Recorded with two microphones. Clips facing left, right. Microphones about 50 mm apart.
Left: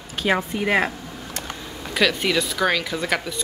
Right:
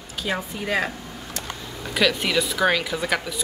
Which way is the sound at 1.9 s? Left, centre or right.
Centre.